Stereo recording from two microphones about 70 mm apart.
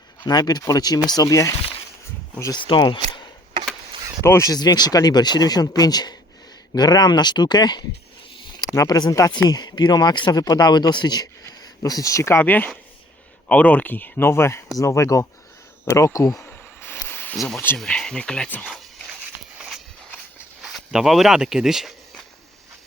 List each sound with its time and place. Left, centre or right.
0.3 s speech: left
1.2 s speech: left
2.5 s speech: left
4.2 s speech: left
4.4 s speech: left
8.7 s speech: left
9.0 s speech: left
9.5 s speech: left
12.3 s speech: left
16.8 s a sound: left
17.3 s speech: centre
18.7 s a sound: centre
19.5 s walk: centre
20.6 s speech: centre